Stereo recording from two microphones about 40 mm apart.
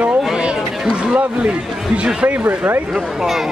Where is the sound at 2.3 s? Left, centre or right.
Right.